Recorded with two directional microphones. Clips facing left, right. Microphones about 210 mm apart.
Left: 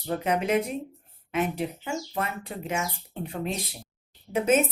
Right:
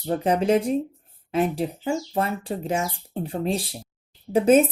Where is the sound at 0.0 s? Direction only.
30° right (ahead or behind).